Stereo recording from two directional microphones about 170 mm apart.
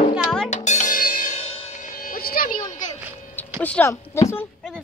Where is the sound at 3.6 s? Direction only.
10° left (ahead or behind).